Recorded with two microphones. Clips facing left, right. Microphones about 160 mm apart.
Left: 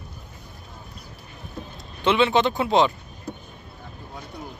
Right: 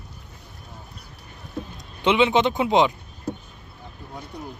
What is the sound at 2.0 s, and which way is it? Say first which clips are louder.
Speech: right 1 dB; 20° right (ahead or behind).